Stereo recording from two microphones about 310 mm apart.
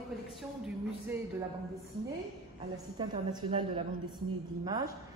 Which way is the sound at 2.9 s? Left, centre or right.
Centre.